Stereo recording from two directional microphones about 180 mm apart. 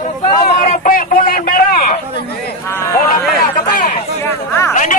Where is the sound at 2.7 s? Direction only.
15° left (ahead or behind).